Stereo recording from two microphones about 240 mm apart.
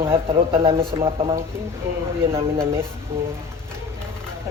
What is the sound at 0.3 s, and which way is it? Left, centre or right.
Speech, right.